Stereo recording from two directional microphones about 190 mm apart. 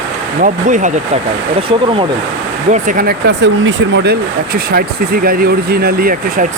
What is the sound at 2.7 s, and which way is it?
Speech, 45° right (ahead or behind).